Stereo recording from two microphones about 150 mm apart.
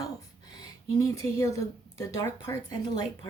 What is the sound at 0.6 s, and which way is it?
Speech, 20° left (ahead or behind).